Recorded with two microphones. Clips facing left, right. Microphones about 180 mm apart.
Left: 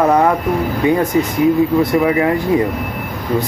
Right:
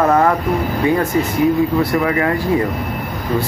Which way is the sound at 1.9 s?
15° left (ahead or behind).